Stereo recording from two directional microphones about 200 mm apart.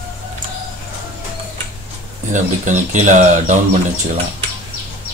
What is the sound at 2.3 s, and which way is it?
Speech, 40° right (ahead or behind).